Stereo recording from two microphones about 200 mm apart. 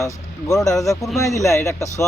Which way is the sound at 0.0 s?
15° left (ahead or behind).